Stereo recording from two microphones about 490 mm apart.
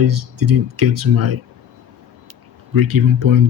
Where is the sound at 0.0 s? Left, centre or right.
Right.